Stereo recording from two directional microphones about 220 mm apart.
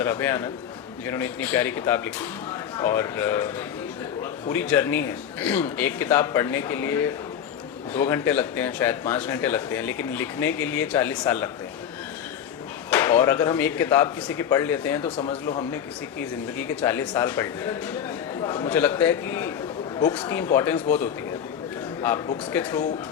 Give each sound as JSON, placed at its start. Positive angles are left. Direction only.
{"t": 0.0, "sound": "speech", "side_deg": 10}
{"t": 12.9, "sound": "speech", "side_deg": 10}
{"t": 15.1, "sound": "speech", "side_deg": 25}
{"t": 16.6, "sound": "speech", "side_deg": 10}
{"t": 22.5, "sound": "speech", "side_deg": 10}